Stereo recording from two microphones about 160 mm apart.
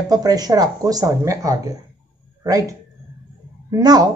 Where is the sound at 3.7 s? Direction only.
25° right (ahead or behind).